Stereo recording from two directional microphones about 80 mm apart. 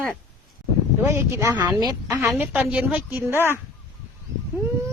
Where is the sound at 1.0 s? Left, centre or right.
Right.